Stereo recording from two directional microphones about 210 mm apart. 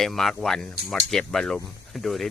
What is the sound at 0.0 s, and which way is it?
Speech, centre (ahead or behind).